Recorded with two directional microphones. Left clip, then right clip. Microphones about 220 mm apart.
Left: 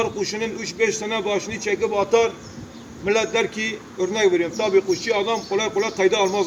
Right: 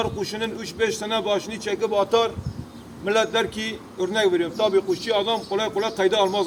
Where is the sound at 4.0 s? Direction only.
Centre (ahead or behind).